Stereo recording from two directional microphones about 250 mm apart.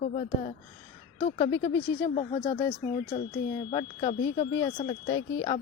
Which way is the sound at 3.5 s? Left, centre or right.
Centre.